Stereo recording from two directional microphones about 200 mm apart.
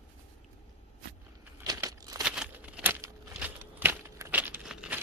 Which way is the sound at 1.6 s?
20° right (ahead or behind).